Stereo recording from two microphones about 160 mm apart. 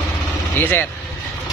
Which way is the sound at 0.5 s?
10° left (ahead or behind).